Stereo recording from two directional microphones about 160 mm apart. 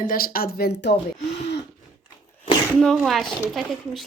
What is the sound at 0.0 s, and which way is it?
Speech, 65° left (ahead or behind).